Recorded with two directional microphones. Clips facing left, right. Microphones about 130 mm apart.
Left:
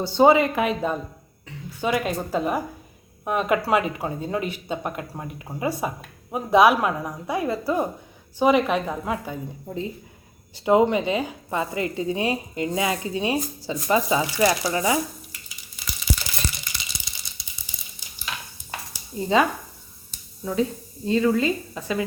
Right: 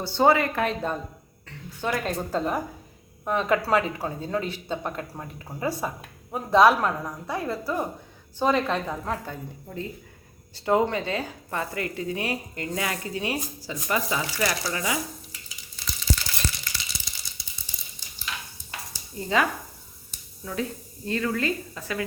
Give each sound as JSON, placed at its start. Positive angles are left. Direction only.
{"t": 0.0, "sound": "a woman's voice", "side_deg": 20}
{"t": 9.6, "sound": "speech", "side_deg": 20}
{"t": 15.7, "sound": "a sound", "side_deg": 15}
{"t": 19.1, "sound": "speech", "side_deg": 25}